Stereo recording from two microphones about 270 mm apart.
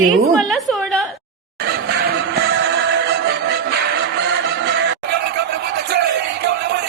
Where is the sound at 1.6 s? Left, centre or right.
Right.